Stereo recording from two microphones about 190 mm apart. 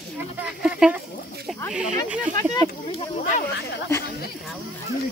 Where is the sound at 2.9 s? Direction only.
40° left (ahead or behind).